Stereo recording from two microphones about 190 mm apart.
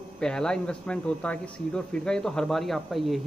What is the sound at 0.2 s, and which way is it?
A man's voice, 5° left (ahead or behind).